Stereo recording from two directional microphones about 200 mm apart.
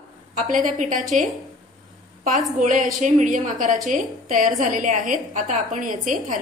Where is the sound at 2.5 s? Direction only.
40° right (ahead or behind).